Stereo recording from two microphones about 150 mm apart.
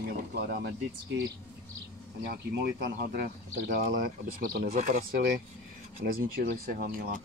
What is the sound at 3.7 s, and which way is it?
Speech, 85° right.